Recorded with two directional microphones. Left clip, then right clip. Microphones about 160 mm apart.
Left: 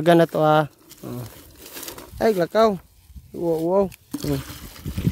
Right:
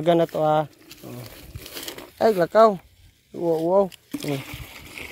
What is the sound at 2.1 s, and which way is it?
Speech, 30° left (ahead or behind).